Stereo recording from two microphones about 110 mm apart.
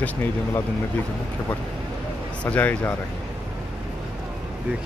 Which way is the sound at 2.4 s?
15° left (ahead or behind).